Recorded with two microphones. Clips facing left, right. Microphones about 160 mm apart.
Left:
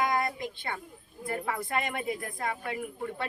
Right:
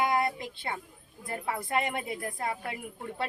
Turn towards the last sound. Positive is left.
turn(degrees=-25)  # may be behind; listen again after turning